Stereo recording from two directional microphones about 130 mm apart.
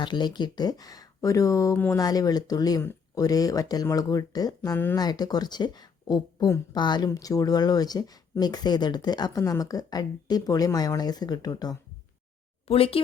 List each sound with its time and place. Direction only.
0.0 s speech: 35° left (ahead or behind)
1.7 s speech: 15° left (ahead or behind)
2.0 s speech: 30° left (ahead or behind)
12.6 s speech: 45° left (ahead or behind)